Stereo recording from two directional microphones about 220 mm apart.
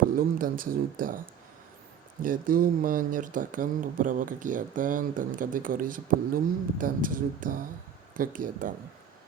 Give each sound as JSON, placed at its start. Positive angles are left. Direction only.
{"t": 0.2, "sound": "speech", "side_deg": -40}
{"t": 2.2, "sound": "speech", "side_deg": -40}